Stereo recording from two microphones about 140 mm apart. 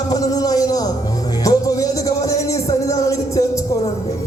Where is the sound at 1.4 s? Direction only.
25° left (ahead or behind).